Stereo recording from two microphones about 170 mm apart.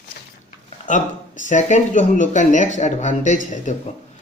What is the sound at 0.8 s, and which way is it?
Speech, 45° left (ahead or behind).